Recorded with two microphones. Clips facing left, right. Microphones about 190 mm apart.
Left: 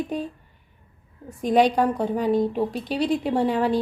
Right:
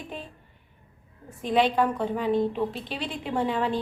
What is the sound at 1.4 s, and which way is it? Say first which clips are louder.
A woman's voice: left 4 dB; 45° left (ahead or behind).